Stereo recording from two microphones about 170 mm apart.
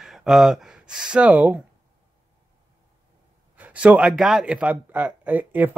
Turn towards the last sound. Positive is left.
turn(degrees=-10)  # may be behind; listen again after turning